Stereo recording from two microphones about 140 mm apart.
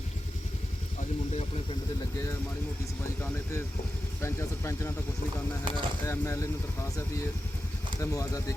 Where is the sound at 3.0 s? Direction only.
15° left (ahead or behind).